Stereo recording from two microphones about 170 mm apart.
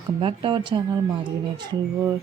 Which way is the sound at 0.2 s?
30° right (ahead or behind).